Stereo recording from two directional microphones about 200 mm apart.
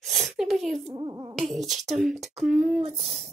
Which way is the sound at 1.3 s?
Centre (ahead or behind).